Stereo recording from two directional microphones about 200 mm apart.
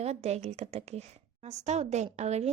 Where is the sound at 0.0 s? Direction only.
30° right (ahead or behind).